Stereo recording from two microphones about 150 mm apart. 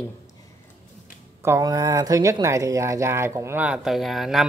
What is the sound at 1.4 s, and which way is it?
Speech, 20° right (ahead or behind).